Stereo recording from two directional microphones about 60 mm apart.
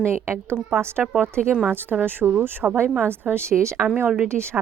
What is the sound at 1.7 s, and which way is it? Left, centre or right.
A woman's voice, right.